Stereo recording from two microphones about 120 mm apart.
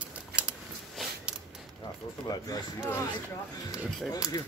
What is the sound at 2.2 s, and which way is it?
Speech, 30° left (ahead or behind).